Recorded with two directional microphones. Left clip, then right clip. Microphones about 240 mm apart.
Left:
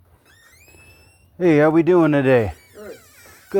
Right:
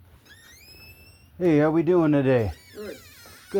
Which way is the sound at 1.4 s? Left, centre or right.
Left.